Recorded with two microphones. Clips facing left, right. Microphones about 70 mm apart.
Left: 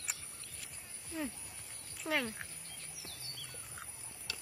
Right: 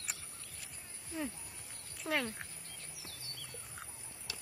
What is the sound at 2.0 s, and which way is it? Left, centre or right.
Speech, centre.